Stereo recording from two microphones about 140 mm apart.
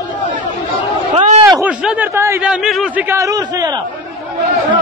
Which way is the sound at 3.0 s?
20° right (ahead or behind).